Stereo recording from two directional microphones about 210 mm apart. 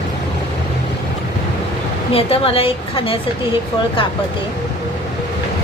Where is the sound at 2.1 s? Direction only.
25° left (ahead or behind).